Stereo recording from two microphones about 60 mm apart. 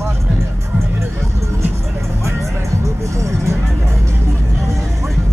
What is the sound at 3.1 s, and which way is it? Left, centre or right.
Vehicle, right.